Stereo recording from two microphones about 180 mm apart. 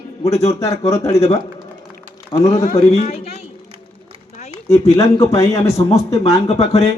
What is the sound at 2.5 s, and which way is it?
Speech, 40° left (ahead or behind).